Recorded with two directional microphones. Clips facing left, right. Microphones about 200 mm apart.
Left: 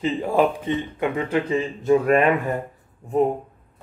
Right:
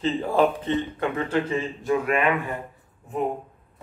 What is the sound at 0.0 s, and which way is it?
Speech, 15° left (ahead or behind).